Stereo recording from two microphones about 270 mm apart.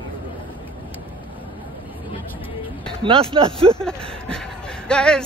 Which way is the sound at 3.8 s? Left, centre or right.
Centre.